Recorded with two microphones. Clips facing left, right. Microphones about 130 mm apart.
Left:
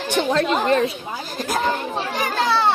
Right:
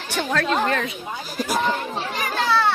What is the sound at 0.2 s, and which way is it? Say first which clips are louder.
Speech: left 2 dB; 25° left (ahead or behind).